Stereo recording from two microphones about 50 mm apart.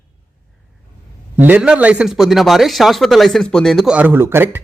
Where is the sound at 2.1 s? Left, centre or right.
Centre.